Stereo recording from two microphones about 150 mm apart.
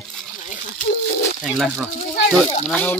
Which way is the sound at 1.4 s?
Centre (ahead or behind).